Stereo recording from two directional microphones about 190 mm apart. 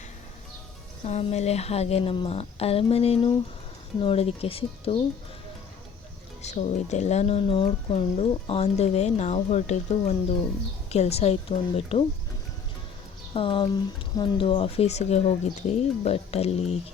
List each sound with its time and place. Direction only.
1.0 s speech: 35° left (ahead or behind)
6.4 s speech: 35° left (ahead or behind)
13.3 s speech: 25° left (ahead or behind)